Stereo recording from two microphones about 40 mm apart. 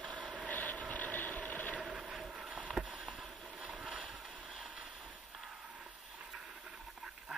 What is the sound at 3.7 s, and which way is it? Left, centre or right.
Vehicle, centre.